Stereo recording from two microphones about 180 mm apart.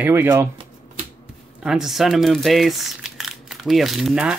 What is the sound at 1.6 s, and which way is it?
Speech, centre (ahead or behind).